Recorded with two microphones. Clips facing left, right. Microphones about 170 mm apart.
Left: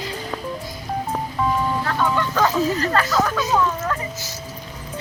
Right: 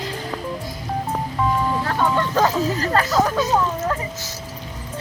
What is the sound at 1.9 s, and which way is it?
Speech, 30° right (ahead or behind).